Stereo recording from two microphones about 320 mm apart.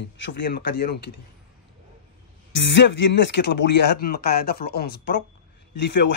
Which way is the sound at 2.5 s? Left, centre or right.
Left.